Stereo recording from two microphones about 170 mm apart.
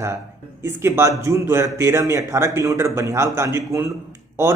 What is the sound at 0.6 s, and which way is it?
Speech, 15° right (ahead or behind).